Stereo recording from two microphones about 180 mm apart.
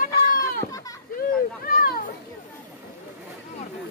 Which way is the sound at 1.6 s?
55° left (ahead or behind).